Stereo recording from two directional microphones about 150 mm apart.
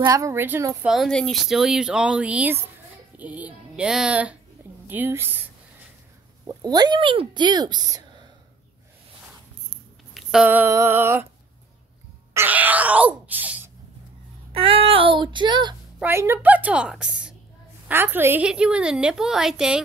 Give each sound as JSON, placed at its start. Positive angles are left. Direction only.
{"t": 0.0, "sound": "speech", "side_deg": -20}
{"t": 0.8, "sound": "a woman's voice", "side_deg": 0}
{"t": 6.4, "sound": "speech", "side_deg": -25}
{"t": 10.1, "sound": "a woman's voice", "side_deg": -5}
{"t": 12.4, "sound": "groan", "side_deg": -10}
{"t": 14.5, "sound": "child singing", "side_deg": -40}
{"t": 16.0, "sound": "a woman's voice", "side_deg": -15}